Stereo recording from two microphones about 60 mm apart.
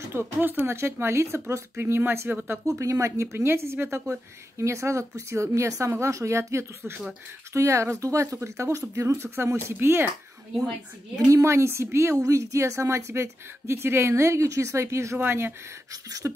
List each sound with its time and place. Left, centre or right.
0.1 s speech: right
0.7 s a woman's voice: right
2.8 s a woman's voice: right
11.4 s a woman's voice: right
15.1 s speech: right
15.9 s a sound: right